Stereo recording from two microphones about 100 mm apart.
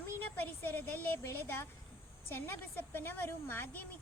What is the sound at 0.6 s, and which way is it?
A child's voice, 20° left (ahead or behind).